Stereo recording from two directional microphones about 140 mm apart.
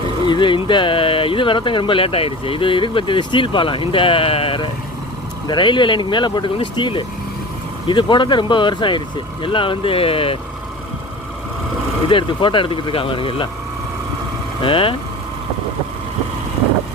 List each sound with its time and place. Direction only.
0.3 s speech: 35° left (ahead or behind)
12.0 s speech: 35° left (ahead or behind)
14.6 s speech: 40° left (ahead or behind)